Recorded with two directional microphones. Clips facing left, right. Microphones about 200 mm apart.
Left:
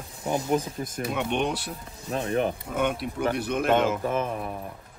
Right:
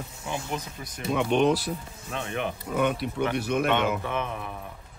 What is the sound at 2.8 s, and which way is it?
Speech, centre (ahead or behind).